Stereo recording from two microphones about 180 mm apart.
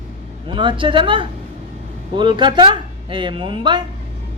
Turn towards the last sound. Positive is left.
turn(degrees=-25)  # may be behind; listen again after turning